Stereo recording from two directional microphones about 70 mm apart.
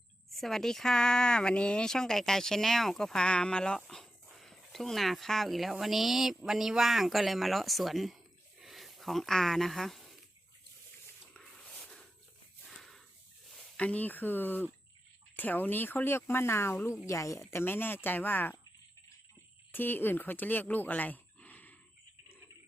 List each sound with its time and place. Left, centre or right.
0.3 s speech: centre
8.6 s a sound: centre
11.8 s a sound: centre
13.7 s speech: left
17.1 s a woman's voice: left
17.5 s speech: left
19.7 s speech: left